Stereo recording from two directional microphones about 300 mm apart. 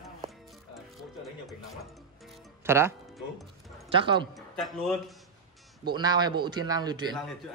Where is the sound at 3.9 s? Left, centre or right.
Centre.